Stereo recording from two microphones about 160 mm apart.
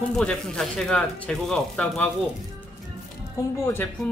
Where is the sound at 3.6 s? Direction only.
15° left (ahead or behind).